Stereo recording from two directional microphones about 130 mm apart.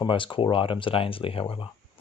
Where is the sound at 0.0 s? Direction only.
40° left (ahead or behind).